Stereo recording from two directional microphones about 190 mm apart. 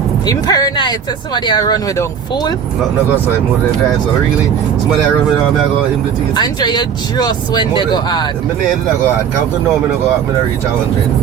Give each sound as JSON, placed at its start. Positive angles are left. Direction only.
{"t": 0.3, "sound": "speech", "side_deg": 20}
{"t": 6.3, "sound": "speech", "side_deg": 20}